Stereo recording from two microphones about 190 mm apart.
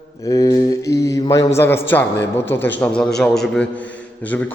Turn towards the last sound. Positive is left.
turn(degrees=10)  # may be behind; listen again after turning